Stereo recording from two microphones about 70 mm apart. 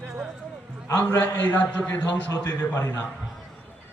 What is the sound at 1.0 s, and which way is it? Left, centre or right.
A man's voice, left.